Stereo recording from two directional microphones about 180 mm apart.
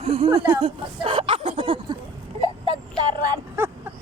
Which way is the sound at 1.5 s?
30° right (ahead or behind).